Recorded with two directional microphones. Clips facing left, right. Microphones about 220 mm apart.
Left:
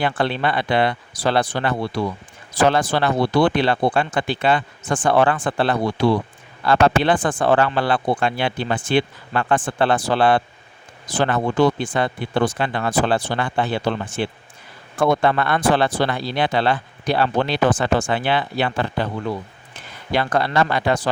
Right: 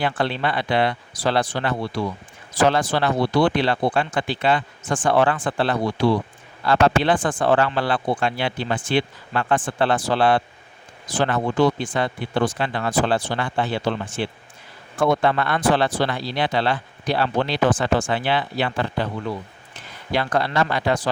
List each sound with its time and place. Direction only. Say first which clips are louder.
0.0 s speech: left 2 dB; 60° left (ahead or behind)
20.1 s speech: left 2 dB; 55° left (ahead or behind)